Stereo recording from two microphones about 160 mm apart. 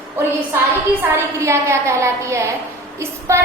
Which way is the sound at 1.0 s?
15° right (ahead or behind).